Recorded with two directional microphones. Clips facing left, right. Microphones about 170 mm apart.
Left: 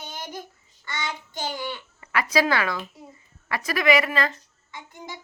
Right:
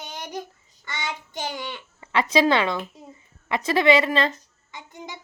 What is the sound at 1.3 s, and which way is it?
Babbling, 20° right (ahead or behind).